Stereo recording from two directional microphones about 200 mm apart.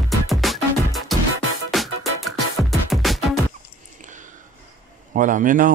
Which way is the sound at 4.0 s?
40° right (ahead or behind).